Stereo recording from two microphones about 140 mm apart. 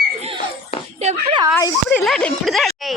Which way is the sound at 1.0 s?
55° right (ahead or behind).